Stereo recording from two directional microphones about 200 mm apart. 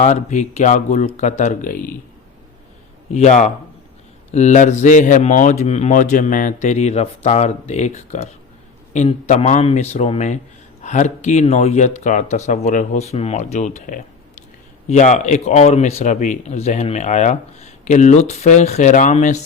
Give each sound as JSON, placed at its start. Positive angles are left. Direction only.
{"t": 0.0, "sound": "speech", "side_deg": 35}
{"t": 3.1, "sound": "speech", "side_deg": 35}